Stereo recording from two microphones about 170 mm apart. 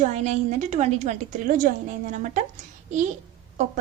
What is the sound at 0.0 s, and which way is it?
A woman's voice, 40° right (ahead or behind).